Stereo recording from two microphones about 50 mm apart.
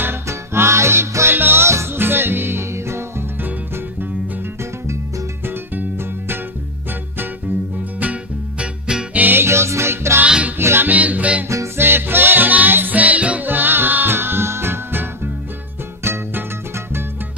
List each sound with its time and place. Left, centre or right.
0.3 s music: right
1.7 s music: right
2.0 s music: right
5.5 s music: right
8.0 s music: right
9.4 s music: right
10.2 s music: right
10.6 s music: right
10.9 s music: right
11.4 s music: right
11.8 s music: right
13.5 s music: right
16.0 s music: right